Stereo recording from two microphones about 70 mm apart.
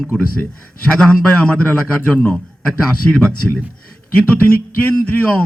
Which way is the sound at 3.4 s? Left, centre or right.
Centre.